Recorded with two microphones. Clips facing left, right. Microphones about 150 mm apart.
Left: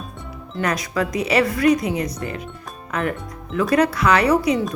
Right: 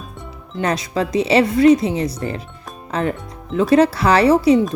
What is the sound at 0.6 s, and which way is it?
Speech, 25° right (ahead or behind).